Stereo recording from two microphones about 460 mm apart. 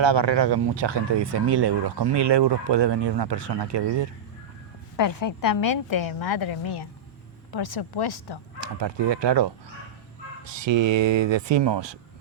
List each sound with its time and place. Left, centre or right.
0.0 s speech: right
4.9 s a woman's voice: left
5.9 s a woman's voice: left
6.1 s a woman's voice: left
6.4 s speech: left
7.5 s a woman's voice: left
8.5 s speech: right
10.6 s speech: right